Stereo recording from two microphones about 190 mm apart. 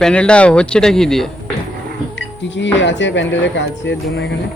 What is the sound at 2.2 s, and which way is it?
Music, 70° left (ahead or behind).